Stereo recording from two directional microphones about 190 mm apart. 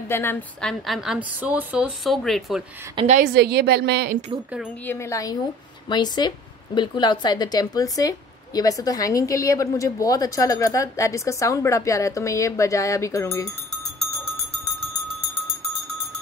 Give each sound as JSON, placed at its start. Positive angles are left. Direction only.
{"t": 0.1, "sound": "a woman's voice", "side_deg": 10}
{"t": 3.0, "sound": "a woman's voice", "side_deg": -35}
{"t": 3.3, "sound": "a woman's voice", "side_deg": -60}
{"t": 4.8, "sound": "a woman's voice", "side_deg": 15}